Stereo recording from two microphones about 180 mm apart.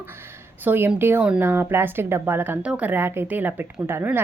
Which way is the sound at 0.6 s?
10° right (ahead or behind).